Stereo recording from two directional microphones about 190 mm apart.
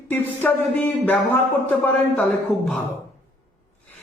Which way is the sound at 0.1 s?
10° left (ahead or behind).